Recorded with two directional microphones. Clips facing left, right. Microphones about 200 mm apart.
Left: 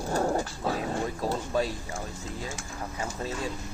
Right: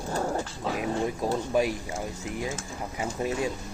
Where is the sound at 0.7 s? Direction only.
15° right (ahead or behind).